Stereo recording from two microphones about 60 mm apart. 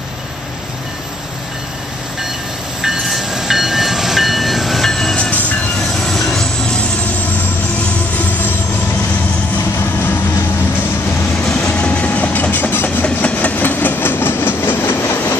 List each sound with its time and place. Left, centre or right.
2.8 s train: centre
5.1 s train: left
6.0 s train: centre
11.5 s train: centre; by 15.1 s left